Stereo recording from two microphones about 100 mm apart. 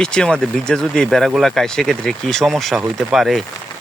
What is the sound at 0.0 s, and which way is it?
Speech, 10° left (ahead or behind).